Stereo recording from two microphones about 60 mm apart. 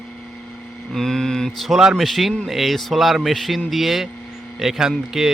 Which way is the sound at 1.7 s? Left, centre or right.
Centre.